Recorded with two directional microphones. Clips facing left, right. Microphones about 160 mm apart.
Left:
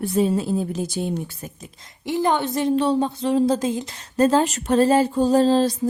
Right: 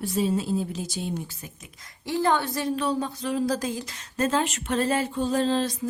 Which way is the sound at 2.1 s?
20° left (ahead or behind).